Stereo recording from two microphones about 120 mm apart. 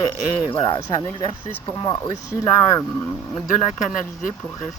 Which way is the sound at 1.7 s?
30° left (ahead or behind).